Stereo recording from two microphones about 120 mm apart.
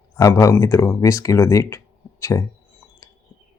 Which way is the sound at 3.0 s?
25° left (ahead or behind).